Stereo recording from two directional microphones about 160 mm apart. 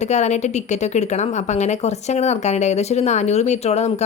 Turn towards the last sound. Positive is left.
turn(degrees=45)  # may be behind; listen again after turning